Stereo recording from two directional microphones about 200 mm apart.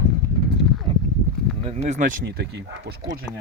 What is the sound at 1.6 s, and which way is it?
Speech, 35° right (ahead or behind).